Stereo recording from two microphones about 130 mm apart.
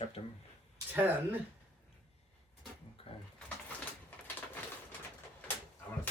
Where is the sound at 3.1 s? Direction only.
45° left (ahead or behind).